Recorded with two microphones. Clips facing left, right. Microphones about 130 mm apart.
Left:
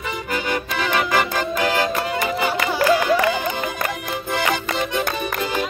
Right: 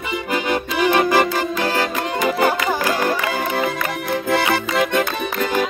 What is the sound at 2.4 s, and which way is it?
Music, 45° right (ahead or behind).